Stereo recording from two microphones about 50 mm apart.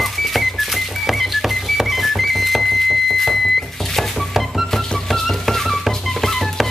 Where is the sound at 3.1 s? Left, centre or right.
Centre.